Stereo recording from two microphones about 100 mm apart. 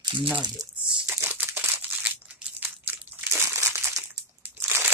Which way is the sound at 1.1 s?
20° right (ahead or behind).